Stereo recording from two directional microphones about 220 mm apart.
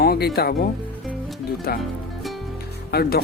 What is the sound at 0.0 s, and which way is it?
Music, 45° left (ahead or behind).